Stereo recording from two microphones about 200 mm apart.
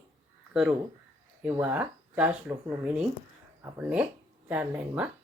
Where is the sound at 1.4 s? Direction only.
10° right (ahead or behind).